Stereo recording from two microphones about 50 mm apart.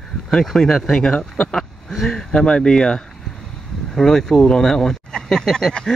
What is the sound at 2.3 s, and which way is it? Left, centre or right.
Speech, centre.